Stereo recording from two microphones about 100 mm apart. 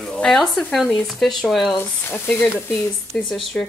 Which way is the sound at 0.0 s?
5° left (ahead or behind).